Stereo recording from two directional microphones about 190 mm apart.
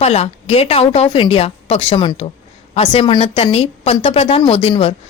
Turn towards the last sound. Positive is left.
turn(degrees=30)  # may be behind; listen again after turning